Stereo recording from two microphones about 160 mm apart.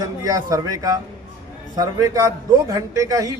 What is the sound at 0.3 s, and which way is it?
A man's voice, 20° right (ahead or behind).